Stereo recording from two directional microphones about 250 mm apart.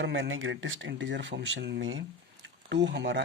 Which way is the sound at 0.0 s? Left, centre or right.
Right.